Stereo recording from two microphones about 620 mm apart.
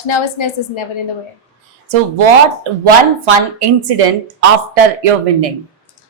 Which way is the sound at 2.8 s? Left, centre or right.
Right.